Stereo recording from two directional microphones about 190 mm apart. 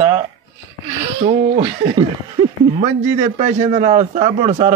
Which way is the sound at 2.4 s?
20° right (ahead or behind).